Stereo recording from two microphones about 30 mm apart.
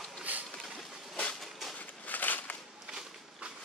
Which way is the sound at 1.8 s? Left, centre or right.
Left.